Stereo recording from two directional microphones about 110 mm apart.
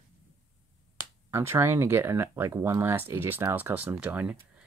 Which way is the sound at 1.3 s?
20° right (ahead or behind).